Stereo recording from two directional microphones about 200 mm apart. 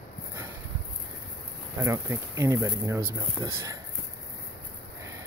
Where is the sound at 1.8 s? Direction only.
15° right (ahead or behind).